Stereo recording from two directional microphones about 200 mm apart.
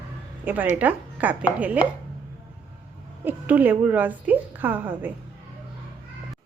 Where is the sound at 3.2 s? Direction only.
10° right (ahead or behind).